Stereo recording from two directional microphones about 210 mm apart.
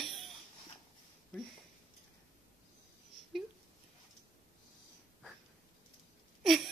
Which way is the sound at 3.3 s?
Centre (ahead or behind).